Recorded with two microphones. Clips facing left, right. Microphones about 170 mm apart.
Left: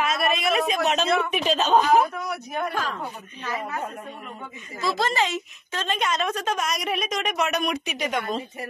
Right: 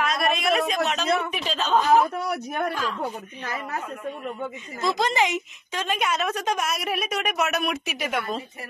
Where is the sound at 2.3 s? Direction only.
55° right (ahead or behind).